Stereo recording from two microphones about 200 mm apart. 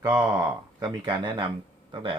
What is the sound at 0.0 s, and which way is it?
Speech, 10° right (ahead or behind).